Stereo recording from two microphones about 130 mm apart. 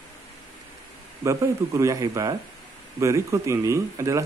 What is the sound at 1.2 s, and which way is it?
A man's voice, 25° right (ahead or behind).